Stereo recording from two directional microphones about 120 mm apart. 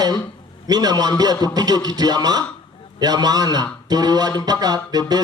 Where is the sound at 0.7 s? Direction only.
35° right (ahead or behind).